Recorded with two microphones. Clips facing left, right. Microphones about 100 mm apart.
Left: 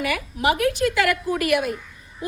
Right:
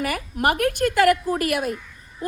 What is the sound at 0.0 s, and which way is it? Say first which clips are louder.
A woman's voice: even; 45° right (ahead or behind).